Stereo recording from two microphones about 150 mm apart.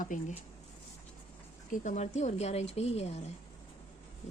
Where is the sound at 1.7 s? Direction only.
50° left (ahead or behind).